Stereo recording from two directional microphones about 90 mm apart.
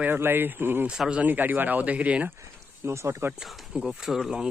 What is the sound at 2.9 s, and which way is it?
Speech, 30° right (ahead or behind).